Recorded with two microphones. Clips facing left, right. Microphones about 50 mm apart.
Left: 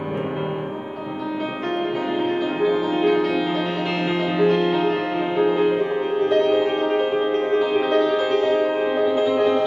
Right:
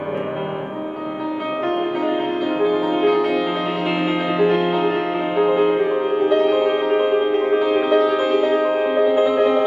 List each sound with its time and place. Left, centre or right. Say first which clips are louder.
2.6 s music: right 2 dB; centre